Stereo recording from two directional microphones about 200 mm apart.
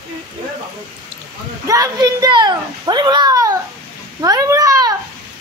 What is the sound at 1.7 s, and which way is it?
A child's voice, 15° right (ahead or behind).